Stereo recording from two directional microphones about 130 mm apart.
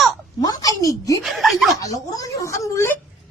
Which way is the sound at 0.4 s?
30° left (ahead or behind).